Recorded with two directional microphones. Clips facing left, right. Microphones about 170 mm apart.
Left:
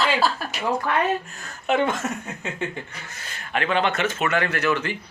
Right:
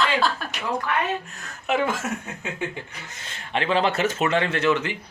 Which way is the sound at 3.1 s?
25° right (ahead or behind).